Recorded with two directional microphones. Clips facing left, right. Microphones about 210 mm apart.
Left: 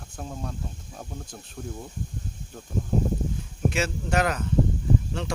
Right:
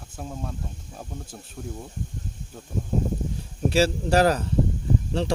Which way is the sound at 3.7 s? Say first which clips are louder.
Right 6 dB; 35° right (ahead or behind).